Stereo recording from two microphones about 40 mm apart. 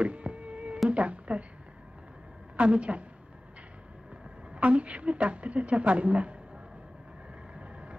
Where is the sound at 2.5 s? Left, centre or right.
Right.